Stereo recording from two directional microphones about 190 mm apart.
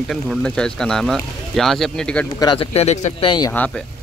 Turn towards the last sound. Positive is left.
turn(degrees=10)  # may be behind; listen again after turning